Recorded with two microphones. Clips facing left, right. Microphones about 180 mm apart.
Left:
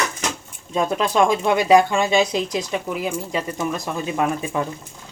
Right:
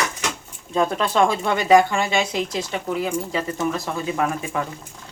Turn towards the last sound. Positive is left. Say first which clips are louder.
# left 1 dB
turn(degrees=20)  # may be behind; listen again after turning